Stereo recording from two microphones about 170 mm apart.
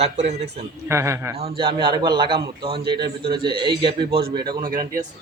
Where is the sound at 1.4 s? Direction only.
35° right (ahead or behind).